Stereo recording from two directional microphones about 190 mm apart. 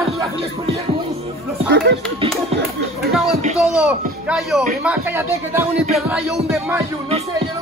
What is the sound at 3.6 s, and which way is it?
Speech, 5° right (ahead or behind).